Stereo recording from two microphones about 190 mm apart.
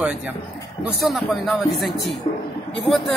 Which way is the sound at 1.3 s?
Centre (ahead or behind).